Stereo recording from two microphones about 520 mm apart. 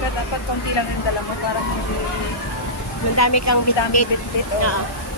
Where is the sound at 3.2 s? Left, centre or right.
Left.